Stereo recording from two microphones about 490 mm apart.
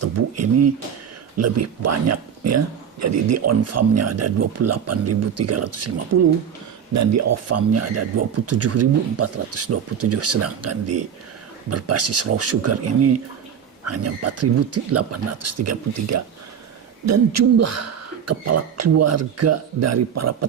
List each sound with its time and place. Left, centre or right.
0.0 s speech: right